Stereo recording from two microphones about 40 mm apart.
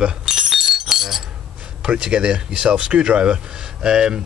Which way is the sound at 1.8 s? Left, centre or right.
Right.